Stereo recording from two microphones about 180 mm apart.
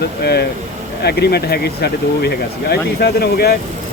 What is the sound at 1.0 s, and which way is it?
Speech, 65° left (ahead or behind).